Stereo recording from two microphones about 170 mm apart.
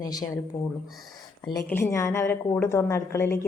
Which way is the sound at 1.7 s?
15° left (ahead or behind).